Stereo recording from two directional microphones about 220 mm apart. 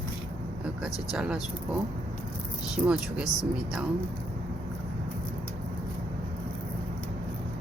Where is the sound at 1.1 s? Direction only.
5° right (ahead or behind).